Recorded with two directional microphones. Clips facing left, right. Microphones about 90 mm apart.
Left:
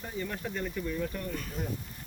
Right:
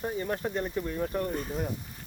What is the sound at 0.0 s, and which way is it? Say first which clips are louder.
Speech: right 5 dB; 35° right (ahead or behind).